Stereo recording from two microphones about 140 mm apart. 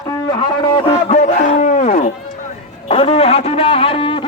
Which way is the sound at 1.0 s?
55° left (ahead or behind).